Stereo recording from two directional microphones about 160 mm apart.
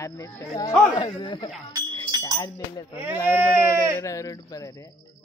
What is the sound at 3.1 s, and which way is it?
Speech, 15° right (ahead or behind).